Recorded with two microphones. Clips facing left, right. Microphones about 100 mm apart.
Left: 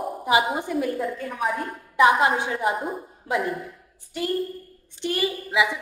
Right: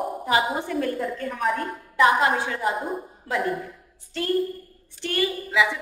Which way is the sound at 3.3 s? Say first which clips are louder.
Even; 10° left (ahead or behind).